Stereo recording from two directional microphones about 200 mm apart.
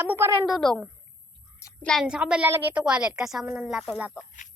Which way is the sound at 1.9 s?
Centre (ahead or behind).